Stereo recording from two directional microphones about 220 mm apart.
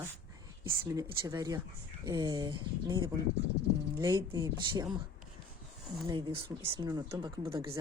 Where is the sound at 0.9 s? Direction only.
15° right (ahead or behind).